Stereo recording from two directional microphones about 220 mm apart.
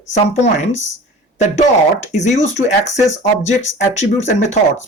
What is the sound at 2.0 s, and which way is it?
Speech, 30° left (ahead or behind).